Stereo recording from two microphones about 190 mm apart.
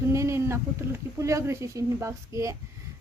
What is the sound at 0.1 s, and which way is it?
Speech, 15° right (ahead or behind).